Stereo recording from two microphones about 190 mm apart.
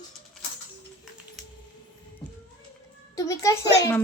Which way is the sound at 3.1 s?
15° left (ahead or behind).